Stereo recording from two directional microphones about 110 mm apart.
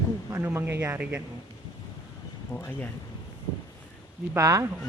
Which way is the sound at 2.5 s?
20° left (ahead or behind).